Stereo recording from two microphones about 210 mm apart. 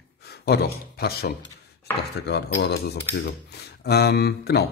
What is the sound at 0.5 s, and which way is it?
Speech, 50° left (ahead or behind).